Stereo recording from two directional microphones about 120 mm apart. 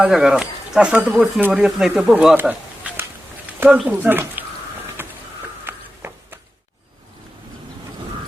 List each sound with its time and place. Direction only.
0.0 s speech: 5° right (ahead or behind)
1.6 s speech: 5° right (ahead or behind)
2.1 s a sound: 15° right (ahead or behind)
3.8 s speech: 15° right (ahead or behind)
5.0 s a sound: 20° right (ahead or behind)
5.6 s walk: 20° right (ahead or behind)